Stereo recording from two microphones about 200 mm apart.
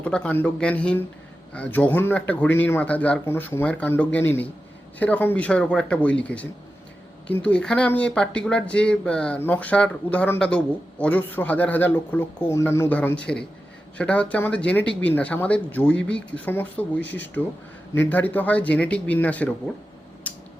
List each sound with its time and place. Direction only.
0.0 s speech: 5° left (ahead or behind)
17.0 s speech: 60° left (ahead or behind)
17.9 s speech: 10° left (ahead or behind)
20.3 s a sound: 10° left (ahead or behind)